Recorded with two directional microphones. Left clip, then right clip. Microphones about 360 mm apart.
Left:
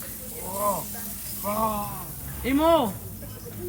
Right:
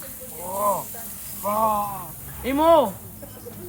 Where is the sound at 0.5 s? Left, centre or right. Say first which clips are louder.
Right 4 dB; centre.